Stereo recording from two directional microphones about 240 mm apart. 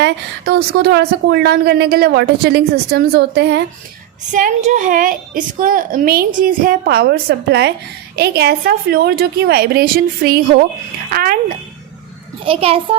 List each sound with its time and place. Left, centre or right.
0.0 s speech: right
4.3 s a woman's voice: right
12.5 s a child's voice: right